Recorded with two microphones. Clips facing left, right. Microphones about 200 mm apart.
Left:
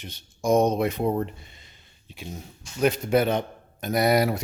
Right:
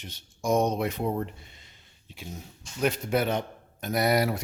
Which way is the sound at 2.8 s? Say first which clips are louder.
Left 5 dB; 20° left (ahead or behind).